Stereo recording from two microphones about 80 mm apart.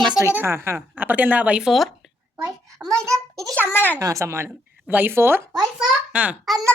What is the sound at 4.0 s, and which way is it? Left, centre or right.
Speech, right.